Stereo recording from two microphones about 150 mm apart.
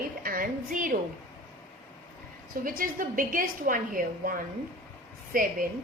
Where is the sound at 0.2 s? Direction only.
70° right (ahead or behind).